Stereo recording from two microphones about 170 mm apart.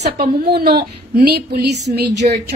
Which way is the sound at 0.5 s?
75° right (ahead or behind).